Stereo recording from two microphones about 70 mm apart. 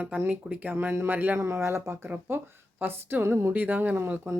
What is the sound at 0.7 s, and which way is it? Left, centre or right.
Speech, right.